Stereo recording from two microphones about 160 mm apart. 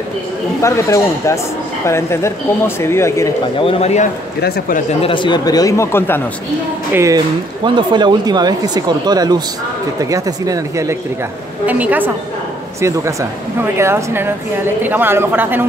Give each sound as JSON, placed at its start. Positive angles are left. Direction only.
{"t": 0.6, "sound": "speech", "side_deg": 20}
{"t": 3.5, "sound": "a man's voice", "side_deg": 40}
{"t": 4.4, "sound": "speech", "side_deg": 75}
{"t": 5.0, "sound": "speech", "side_deg": 30}
{"t": 6.9, "sound": "speech", "side_deg": -15}
{"t": 7.6, "sound": "speech", "side_deg": -30}